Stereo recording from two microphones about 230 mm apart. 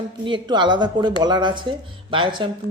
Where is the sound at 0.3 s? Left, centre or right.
Centre.